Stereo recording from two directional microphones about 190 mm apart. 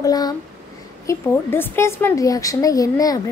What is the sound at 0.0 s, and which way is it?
A woman's voice, 20° left (ahead or behind).